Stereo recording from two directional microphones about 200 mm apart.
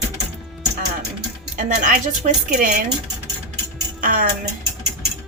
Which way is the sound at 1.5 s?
40° right (ahead or behind).